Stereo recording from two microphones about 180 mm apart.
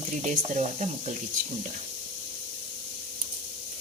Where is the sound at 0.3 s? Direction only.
40° right (ahead or behind).